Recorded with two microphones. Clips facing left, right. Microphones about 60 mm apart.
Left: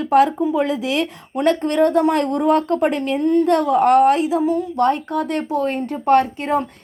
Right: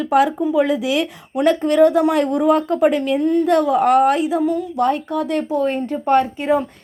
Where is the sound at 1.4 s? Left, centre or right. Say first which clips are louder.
Right 3 dB; left.